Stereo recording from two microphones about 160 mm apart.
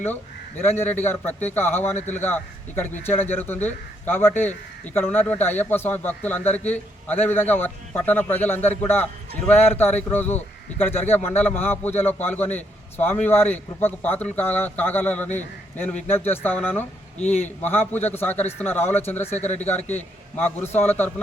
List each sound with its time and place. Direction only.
0.6 s speech: 15° left (ahead or behind)
19.4 s speech: 45° left (ahead or behind)
19.6 s speech: 10° left (ahead or behind)